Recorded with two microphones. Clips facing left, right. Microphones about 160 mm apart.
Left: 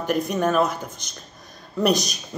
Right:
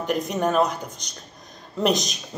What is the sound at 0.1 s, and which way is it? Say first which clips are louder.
A woman's voice: left 1 dB; 20° right (ahead or behind).